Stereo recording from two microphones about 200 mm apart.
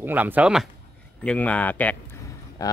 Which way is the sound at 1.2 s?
5° left (ahead or behind).